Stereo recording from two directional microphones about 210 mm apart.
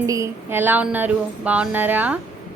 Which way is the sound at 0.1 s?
10° right (ahead or behind).